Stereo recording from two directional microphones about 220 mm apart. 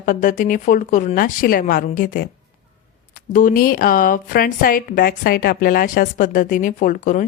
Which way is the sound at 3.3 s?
35° left (ahead or behind).